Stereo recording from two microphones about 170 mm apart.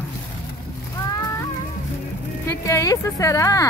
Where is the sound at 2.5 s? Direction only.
20° left (ahead or behind).